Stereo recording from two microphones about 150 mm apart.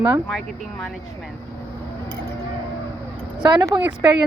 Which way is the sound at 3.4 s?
25° right (ahead or behind).